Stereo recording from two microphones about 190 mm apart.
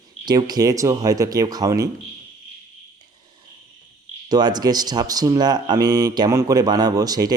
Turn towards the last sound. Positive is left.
turn(degrees=-20)  # may be behind; listen again after turning